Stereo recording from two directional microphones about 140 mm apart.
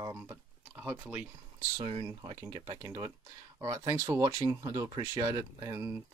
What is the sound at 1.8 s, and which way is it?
Speech, 40° right (ahead or behind).